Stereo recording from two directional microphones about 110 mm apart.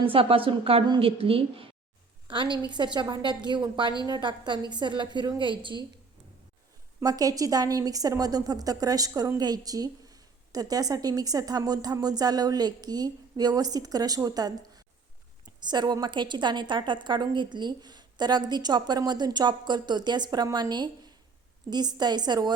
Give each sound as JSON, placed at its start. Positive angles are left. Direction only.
{"t": 0.0, "sound": "a woman's voice", "side_deg": -55}
{"t": 2.2, "sound": "a woman's voice", "side_deg": -50}
{"t": 7.0, "sound": "a woman's voice", "side_deg": -35}